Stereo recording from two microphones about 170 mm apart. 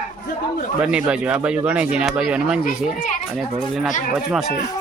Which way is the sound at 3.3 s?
5° right (ahead or behind).